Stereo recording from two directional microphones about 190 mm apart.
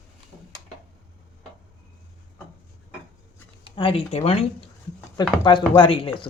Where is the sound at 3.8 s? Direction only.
30° left (ahead or behind).